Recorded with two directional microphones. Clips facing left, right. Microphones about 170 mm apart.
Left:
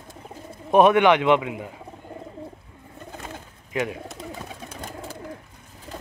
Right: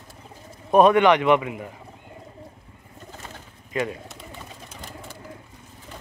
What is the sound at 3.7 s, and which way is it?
Speech, 10° left (ahead or behind).